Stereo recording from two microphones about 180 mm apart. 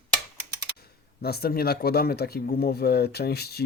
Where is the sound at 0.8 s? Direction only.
60° left (ahead or behind).